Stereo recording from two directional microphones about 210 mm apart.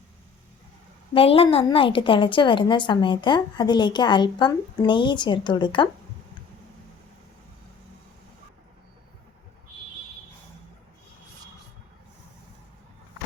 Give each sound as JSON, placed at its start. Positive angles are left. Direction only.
{"t": 1.1, "sound": "a woman's voice", "side_deg": 25}